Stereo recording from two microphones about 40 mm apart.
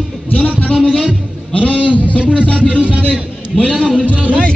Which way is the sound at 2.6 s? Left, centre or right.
Right.